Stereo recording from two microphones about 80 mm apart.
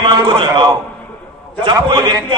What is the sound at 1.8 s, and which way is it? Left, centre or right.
Speech, right.